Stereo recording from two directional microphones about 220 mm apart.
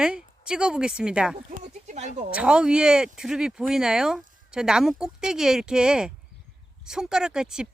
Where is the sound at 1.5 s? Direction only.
35° right (ahead or behind).